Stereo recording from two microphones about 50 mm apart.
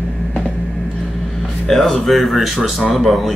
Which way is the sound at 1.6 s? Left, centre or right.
Centre.